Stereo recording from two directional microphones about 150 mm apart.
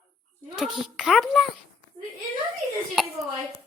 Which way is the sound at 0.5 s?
Centre (ahead or behind).